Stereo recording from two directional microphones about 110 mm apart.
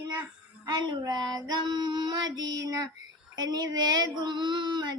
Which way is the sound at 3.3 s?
35° right (ahead or behind).